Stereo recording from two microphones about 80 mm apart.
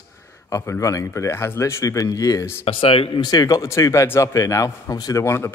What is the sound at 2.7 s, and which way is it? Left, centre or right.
Speech, left.